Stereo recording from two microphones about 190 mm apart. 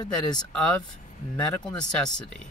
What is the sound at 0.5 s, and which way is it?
Speech, 5° left (ahead or behind).